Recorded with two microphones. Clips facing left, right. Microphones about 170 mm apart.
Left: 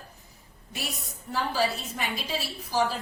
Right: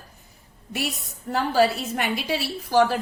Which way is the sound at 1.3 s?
65° right (ahead or behind).